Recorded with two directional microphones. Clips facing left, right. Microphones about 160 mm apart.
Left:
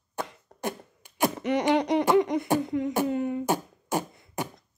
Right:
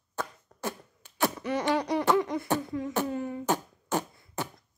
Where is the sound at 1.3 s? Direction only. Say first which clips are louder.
Left 6 dB; 20° left (ahead or behind).